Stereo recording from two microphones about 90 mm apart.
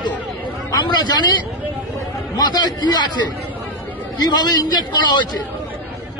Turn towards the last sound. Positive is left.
turn(degrees=55)  # may be behind; listen again after turning